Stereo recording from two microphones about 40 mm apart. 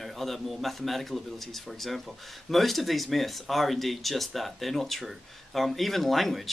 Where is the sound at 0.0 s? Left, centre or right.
Centre.